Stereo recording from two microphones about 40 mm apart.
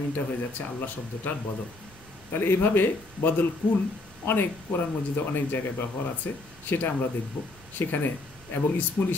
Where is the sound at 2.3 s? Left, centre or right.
Left.